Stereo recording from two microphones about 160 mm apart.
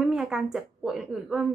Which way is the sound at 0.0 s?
Centre (ahead or behind).